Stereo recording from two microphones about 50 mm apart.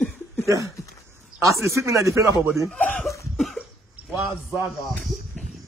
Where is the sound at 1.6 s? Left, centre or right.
Right.